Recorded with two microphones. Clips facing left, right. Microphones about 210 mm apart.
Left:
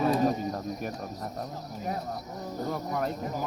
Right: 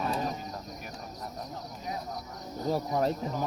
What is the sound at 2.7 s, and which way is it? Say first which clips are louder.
Speech: right 5 dB; 30° right (ahead or behind).